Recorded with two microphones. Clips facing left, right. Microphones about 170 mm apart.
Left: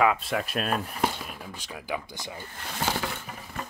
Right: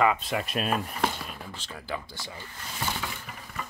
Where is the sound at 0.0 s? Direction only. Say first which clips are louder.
Left 1 dB; centre (ahead or behind); by 2.4 s 15° left (ahead or behind).